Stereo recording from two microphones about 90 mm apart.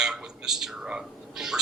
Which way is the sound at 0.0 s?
5° right (ahead or behind).